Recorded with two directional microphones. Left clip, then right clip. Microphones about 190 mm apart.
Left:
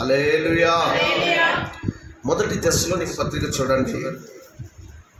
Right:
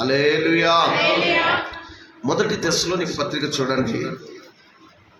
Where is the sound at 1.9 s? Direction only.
30° right (ahead or behind).